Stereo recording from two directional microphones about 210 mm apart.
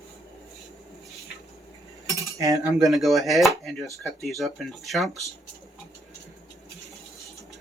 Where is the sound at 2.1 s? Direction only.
15° right (ahead or behind).